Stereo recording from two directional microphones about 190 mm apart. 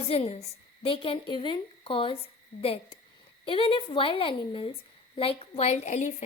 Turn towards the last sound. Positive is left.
turn(degrees=35)  # may be behind; listen again after turning